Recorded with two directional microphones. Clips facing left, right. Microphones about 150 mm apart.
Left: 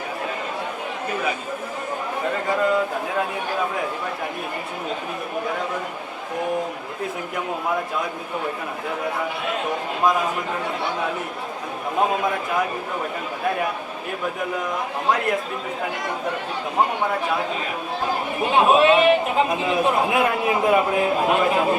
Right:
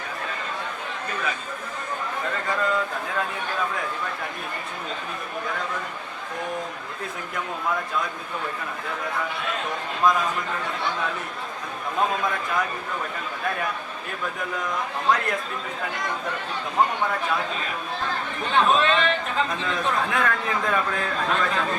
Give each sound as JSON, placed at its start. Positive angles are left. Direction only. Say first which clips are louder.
{"t": 1.1, "sound": "speech", "louder": "left 5 dB", "side_deg": 15}
{"t": 5.5, "sound": "speech", "louder": "left 2 dB", "side_deg": 20}
{"t": 7.3, "sound": "speech", "louder": "left 2 dB", "side_deg": 20}
{"t": 9.0, "sound": "speech", "louder": "left 2 dB", "side_deg": 20}
{"t": 15.0, "sound": "speech", "louder": "left 2 dB", "side_deg": 15}